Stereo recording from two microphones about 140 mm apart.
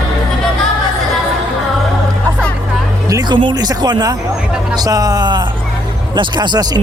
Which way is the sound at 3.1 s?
30° right (ahead or behind).